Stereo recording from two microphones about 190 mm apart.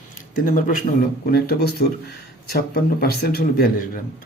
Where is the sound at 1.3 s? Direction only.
55° left (ahead or behind).